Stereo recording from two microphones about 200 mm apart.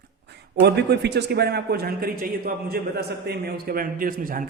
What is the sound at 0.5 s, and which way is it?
A man's voice, 55° right (ahead or behind).